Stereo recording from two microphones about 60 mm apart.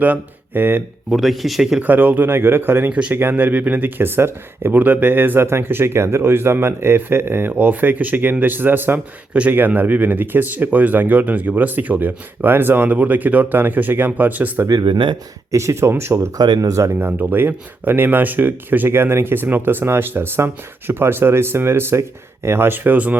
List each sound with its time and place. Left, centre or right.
0.0 s speech: right
1.1 s speech: centre
1.8 s speech: right
2.9 s speech: right
4.8 s speech: right
15.5 s speech: right
16.6 s speech: right
16.9 s speech: right